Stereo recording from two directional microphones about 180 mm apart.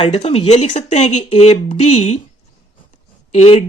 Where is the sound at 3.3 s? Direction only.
35° left (ahead or behind).